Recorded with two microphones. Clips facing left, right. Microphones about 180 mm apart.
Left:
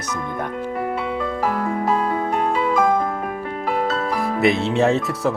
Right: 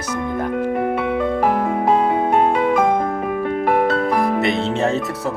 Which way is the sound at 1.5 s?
20° right (ahead or behind).